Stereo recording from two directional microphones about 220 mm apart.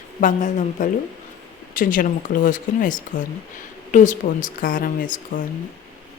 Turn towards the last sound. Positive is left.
turn(degrees=40)  # may be behind; listen again after turning